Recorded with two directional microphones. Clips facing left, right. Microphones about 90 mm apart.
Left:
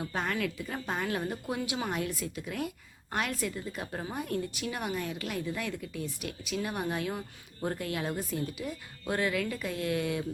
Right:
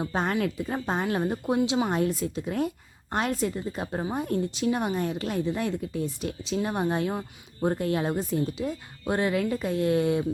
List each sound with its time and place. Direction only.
0.0 s speech: 30° right (ahead or behind)